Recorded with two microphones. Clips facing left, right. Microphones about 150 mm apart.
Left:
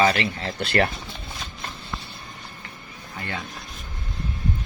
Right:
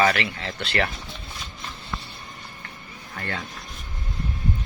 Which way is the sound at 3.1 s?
20° left (ahead or behind).